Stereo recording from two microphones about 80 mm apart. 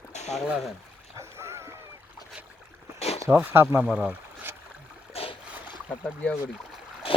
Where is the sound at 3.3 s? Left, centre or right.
Right.